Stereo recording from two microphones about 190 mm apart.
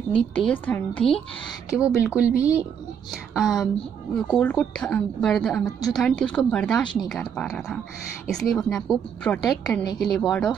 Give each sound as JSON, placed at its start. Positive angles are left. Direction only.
{"t": 0.1, "sound": "a woman's voice", "side_deg": 5}
{"t": 1.8, "sound": "a woman's voice", "side_deg": -5}
{"t": 5.7, "sound": "a woman's voice", "side_deg": 20}
{"t": 5.9, "sound": "a woman's voice", "side_deg": 5}